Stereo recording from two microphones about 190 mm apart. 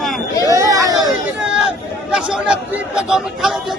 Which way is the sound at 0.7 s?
20° right (ahead or behind).